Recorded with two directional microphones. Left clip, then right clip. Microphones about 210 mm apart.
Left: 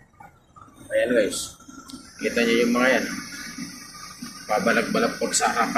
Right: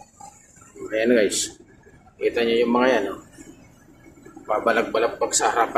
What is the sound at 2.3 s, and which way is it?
Speech, 25° right (ahead or behind).